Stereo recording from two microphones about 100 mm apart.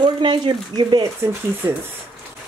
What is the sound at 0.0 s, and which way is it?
Speech, 50° right (ahead or behind).